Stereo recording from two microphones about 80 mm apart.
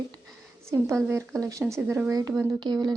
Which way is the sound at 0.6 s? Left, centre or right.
Right.